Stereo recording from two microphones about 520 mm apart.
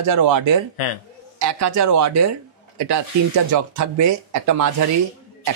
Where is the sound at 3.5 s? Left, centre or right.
Right.